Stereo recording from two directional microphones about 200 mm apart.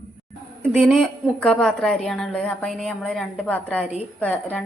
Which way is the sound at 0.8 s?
Centre (ahead or behind).